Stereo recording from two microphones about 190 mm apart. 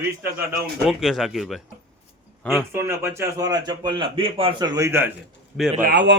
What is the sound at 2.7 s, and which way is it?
A man's voice, 15° right (ahead or behind).